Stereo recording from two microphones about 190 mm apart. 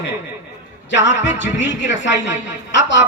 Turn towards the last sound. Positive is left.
turn(degrees=70)  # may be behind; listen again after turning